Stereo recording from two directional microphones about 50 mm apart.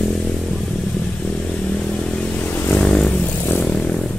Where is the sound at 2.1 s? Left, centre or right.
Left.